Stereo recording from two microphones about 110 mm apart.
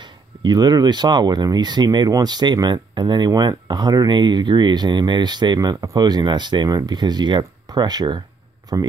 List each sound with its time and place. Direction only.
0.4 s speech: 40° right (ahead or behind)